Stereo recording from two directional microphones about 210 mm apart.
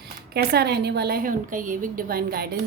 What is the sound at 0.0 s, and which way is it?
A woman's voice, 50° right (ahead or behind).